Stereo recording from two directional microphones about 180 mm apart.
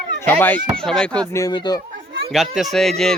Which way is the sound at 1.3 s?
20° left (ahead or behind).